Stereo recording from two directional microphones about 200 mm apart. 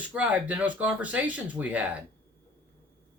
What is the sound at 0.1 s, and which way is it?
Speech, 5° right (ahead or behind).